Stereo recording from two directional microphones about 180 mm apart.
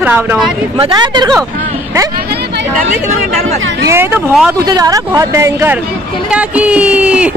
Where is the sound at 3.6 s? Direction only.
90° right.